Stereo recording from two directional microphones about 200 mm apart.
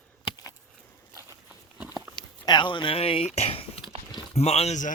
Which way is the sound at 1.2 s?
10° right (ahead or behind).